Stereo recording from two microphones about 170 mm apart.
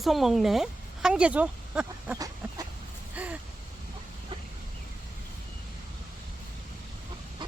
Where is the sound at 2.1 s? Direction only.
20° right (ahead or behind).